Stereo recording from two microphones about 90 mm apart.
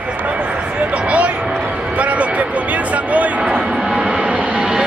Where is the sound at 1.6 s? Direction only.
10° right (ahead or behind).